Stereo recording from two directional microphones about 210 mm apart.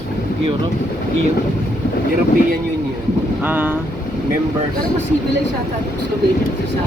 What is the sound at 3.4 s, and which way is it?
Speech, 10° right (ahead or behind).